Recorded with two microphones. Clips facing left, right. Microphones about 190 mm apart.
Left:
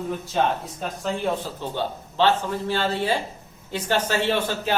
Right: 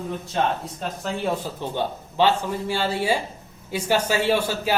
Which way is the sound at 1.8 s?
10° right (ahead or behind).